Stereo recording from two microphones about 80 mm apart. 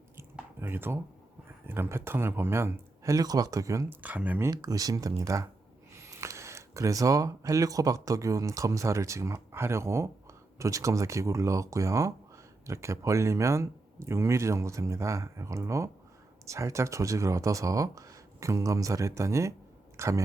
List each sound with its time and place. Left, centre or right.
0.2 s a sound: right
1.6 s speech: right
3.8 s speech: centre
4.5 s speech: right